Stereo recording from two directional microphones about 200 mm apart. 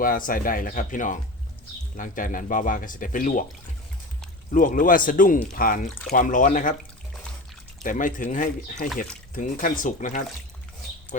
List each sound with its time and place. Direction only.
0.0 s speech: 45° left (ahead or behind)
4.5 s speech: 40° left (ahead or behind)
7.9 s speech: 40° left (ahead or behind)